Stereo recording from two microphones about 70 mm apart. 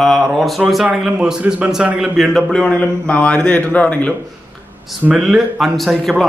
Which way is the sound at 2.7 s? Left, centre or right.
Centre.